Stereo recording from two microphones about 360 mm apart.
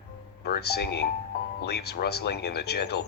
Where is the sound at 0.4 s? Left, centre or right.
Left.